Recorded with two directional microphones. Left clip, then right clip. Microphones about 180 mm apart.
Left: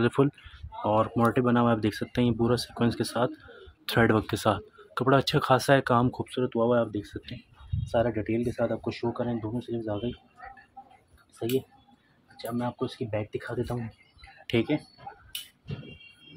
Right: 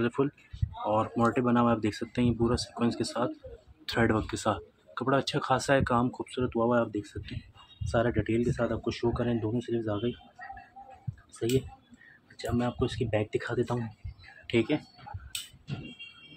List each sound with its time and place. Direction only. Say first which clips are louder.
0.0 s speech: left 4 dB; 40° left (ahead or behind)
1.1 s speech: left 2 dB; 30° left (ahead or behind); by 10.1 s 10° left (ahead or behind)
11.4 s speech: even; 10° left (ahead or behind)
12.4 s speech: right 1 dB; centre (ahead or behind)
14.5 s speech: left 1 dB; 30° left (ahead or behind)